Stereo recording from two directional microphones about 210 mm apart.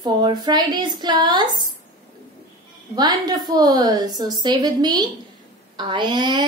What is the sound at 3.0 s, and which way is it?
A woman's voice, 20° right (ahead or behind).